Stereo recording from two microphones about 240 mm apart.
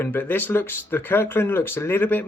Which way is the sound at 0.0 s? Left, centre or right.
Centre.